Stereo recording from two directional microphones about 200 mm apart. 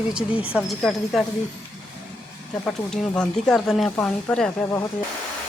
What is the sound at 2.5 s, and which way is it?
Speech, 5° left (ahead or behind).